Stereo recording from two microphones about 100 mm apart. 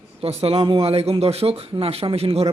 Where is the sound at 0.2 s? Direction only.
90° right.